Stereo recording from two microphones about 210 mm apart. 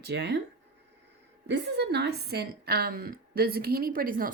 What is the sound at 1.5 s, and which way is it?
A woman's voice, 50° right (ahead or behind).